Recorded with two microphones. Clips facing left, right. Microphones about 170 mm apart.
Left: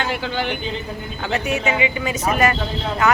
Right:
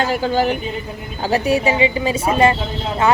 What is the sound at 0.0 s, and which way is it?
A woman's voice, 40° right (ahead or behind).